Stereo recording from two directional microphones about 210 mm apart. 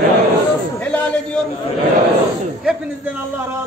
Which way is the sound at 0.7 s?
5° left (ahead or behind).